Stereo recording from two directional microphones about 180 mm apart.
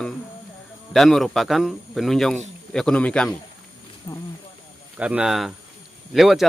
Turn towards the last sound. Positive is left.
turn(degrees=0)  # may be behind; listen again after turning